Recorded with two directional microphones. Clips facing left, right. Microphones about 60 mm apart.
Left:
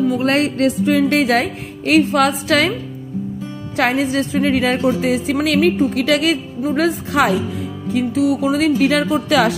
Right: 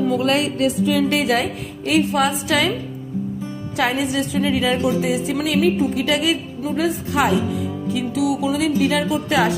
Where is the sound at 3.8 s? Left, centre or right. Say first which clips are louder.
Left 3 dB; left.